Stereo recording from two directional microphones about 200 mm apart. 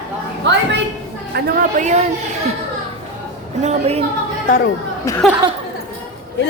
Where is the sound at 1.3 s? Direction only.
50° right (ahead or behind).